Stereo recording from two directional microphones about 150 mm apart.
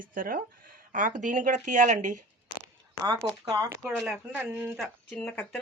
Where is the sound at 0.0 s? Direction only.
70° right (ahead or behind).